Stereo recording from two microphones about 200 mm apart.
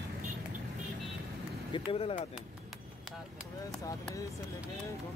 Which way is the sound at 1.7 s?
25° left (ahead or behind).